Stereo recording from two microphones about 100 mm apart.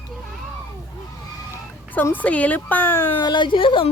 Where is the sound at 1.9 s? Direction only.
20° left (ahead or behind).